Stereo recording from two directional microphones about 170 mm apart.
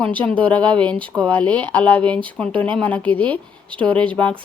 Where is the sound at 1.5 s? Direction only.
25° right (ahead or behind).